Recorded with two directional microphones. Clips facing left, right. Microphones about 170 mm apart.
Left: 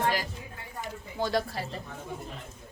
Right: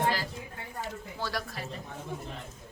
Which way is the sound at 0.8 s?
20° left (ahead or behind).